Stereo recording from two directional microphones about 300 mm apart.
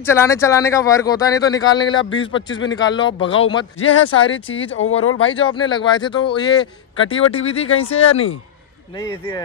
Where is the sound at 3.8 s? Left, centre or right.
Left.